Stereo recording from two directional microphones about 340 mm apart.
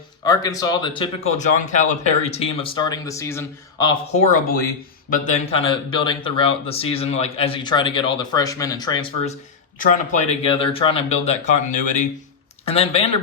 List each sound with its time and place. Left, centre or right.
0.3 s speech: centre